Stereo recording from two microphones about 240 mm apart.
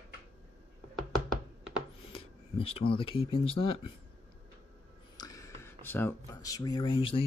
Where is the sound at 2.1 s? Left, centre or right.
Left.